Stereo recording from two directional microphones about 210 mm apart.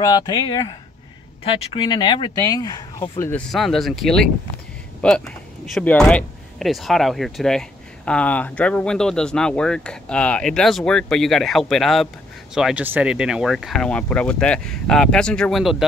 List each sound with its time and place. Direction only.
0.0 s speech: 20° left (ahead or behind); by 15.8 s centre (ahead or behind)